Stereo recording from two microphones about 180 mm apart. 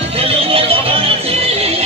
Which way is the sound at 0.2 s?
30° right (ahead or behind).